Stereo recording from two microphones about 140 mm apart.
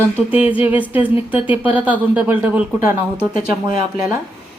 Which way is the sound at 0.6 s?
10° right (ahead or behind).